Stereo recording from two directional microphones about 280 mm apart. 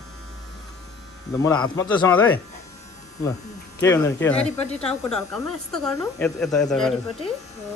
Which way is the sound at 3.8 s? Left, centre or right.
Centre.